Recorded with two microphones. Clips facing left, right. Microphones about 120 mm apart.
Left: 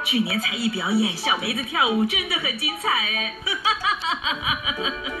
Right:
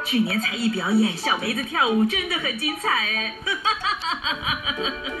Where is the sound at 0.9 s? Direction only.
25° left (ahead or behind).